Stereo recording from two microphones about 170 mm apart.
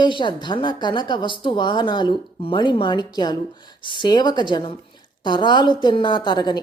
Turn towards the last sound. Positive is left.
turn(degrees=25)  # may be behind; listen again after turning